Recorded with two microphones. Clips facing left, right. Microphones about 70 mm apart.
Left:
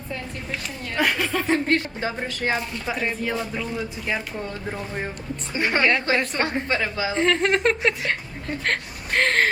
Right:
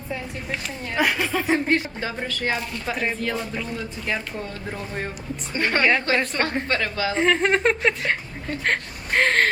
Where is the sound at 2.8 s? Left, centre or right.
Centre.